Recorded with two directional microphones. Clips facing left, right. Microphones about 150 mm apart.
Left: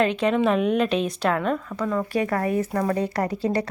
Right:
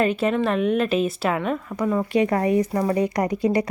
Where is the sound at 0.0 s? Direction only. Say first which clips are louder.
Even; 5° right (ahead or behind).